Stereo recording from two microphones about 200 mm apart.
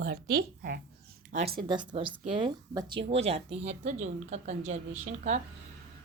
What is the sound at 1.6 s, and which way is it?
Speech, 25° right (ahead or behind).